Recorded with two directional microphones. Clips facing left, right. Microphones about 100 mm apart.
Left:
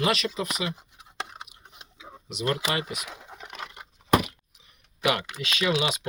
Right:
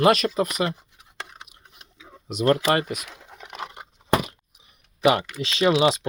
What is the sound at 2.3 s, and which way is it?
Speech, 45° right (ahead or behind).